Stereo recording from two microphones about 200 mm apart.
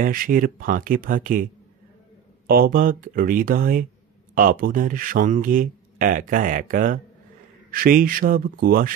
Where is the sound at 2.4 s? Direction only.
45° right (ahead or behind).